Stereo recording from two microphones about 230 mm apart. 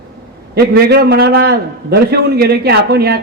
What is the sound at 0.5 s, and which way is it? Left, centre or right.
A man's voice, right.